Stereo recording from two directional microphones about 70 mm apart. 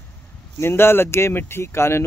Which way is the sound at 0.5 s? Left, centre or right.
Left.